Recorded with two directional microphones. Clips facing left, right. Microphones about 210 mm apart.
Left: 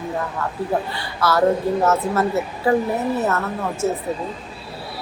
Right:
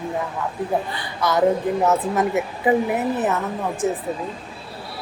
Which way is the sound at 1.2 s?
20° right (ahead or behind).